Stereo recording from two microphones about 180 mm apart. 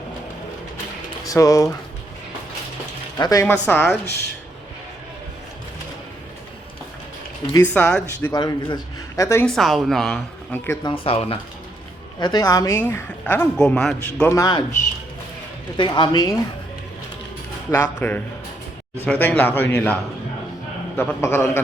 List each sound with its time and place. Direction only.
1.3 s a woman's voice: 20° left (ahead or behind)
3.2 s speech: 20° left (ahead or behind)
3.5 s a woman's voice: 5° left (ahead or behind)
7.5 s a woman's voice: 10° left (ahead or behind)
8.3 s speech: 20° left (ahead or behind)
9.5 s speech: centre (ahead or behind)
10.8 s speech: 30° left (ahead or behind)
12.2 s a woman's voice: 20° left (ahead or behind); by 14.3 s 5° left (ahead or behind)
14.3 s speech: 20° left (ahead or behind)
15.8 s speech: 25° left (ahead or behind)
17.7 s a woman's voice: 10° left (ahead or behind)